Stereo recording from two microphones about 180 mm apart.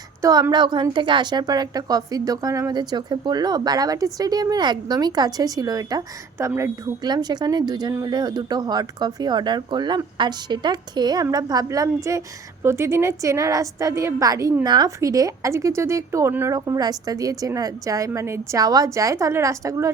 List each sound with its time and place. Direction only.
0.2 s a woman's voice: 20° right (ahead or behind)